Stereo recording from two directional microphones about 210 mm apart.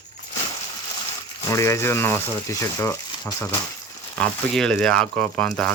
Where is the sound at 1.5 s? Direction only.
15° left (ahead or behind).